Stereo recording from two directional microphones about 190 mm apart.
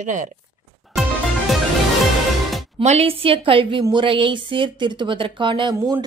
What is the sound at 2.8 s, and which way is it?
Speech, 35° right (ahead or behind).